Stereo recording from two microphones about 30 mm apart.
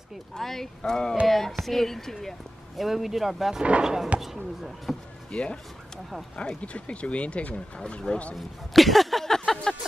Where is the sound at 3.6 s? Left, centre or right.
Right.